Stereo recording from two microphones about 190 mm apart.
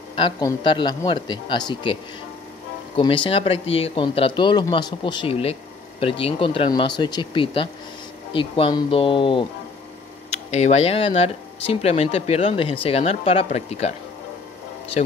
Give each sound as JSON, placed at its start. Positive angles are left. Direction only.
{"t": 0.1, "sound": "speech", "side_deg": 25}
{"t": 3.0, "sound": "speech", "side_deg": 30}
{"t": 10.5, "sound": "speech", "side_deg": 35}